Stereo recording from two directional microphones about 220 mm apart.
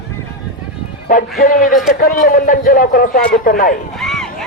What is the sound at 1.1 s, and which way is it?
A man's voice, 40° left (ahead or behind).